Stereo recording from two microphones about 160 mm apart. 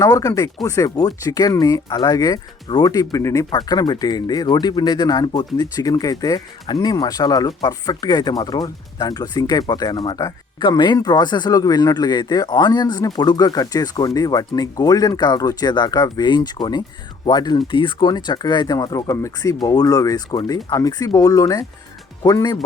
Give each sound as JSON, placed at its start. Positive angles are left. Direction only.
{"t": 0.0, "sound": "speech", "side_deg": 20}